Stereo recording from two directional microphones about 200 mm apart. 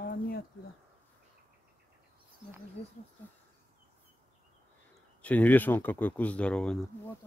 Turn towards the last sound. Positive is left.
turn(degrees=5)  # may be behind; listen again after turning